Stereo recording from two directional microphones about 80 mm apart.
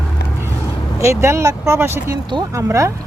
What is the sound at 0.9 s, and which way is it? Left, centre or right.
Speech, right.